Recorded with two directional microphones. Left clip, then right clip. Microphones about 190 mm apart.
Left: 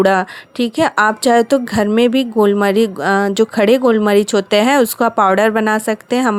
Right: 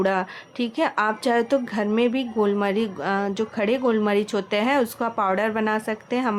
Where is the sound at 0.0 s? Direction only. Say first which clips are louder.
Left 10 dB; 40° left (ahead or behind).